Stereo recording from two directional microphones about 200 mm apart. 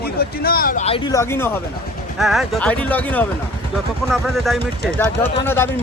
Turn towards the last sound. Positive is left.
turn(degrees=10)  # may be behind; listen again after turning